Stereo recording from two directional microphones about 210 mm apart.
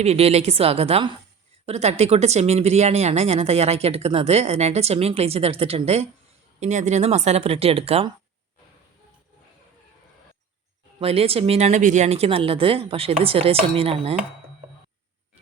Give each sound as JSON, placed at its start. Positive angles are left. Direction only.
{"t": 0.0, "sound": "speech", "side_deg": -30}
{"t": 11.0, "sound": "speech", "side_deg": -30}